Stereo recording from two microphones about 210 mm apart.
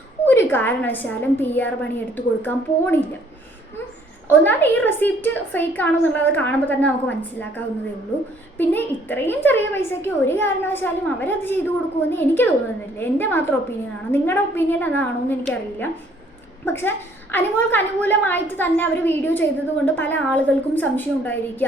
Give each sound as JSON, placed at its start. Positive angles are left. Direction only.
{"t": 0.3, "sound": "a woman's voice", "side_deg": 10}
{"t": 4.3, "sound": "a woman's voice", "side_deg": 10}